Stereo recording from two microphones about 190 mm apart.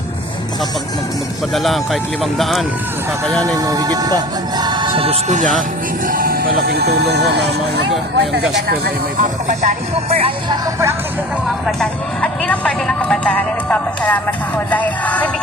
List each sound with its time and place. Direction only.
1.5 s speech: centre (ahead or behind)
3.4 s speech: 20° right (ahead or behind); by 7.5 s 65° right (ahead or behind)
9.5 s speech: 40° right (ahead or behind)
11.6 s speech: 5° left (ahead or behind)